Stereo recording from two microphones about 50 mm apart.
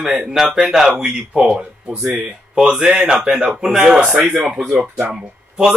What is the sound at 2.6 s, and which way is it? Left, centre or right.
Speech, centre.